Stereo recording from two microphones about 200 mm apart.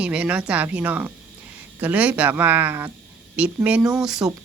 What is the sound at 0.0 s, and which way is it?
A woman's voice, 5° right (ahead or behind).